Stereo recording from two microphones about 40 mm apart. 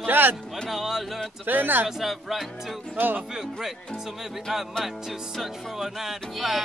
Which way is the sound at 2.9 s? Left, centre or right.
Right.